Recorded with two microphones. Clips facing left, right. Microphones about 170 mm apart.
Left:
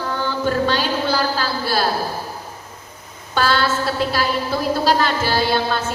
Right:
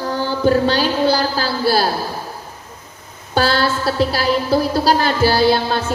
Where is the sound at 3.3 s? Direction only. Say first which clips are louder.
Right 2 dB; 35° right (ahead or behind).